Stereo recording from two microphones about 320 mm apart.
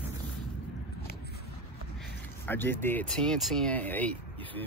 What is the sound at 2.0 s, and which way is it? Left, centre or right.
Speech, centre.